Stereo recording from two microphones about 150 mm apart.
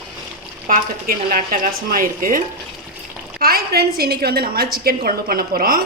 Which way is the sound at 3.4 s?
85° right.